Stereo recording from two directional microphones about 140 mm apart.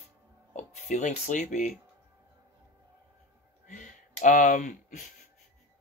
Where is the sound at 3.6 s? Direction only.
65° left (ahead or behind).